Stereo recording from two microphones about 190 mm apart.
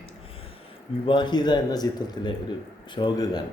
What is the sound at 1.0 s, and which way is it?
A man's voice, 25° left (ahead or behind).